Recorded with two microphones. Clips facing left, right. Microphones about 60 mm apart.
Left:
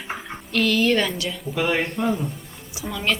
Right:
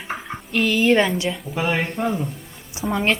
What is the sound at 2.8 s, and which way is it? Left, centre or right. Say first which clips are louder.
Speech: right 4 dB; right.